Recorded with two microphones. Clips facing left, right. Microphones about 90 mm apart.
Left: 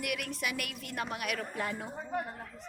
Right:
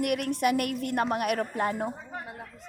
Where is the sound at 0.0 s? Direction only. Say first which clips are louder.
Right 10 dB; 45° right (ahead or behind).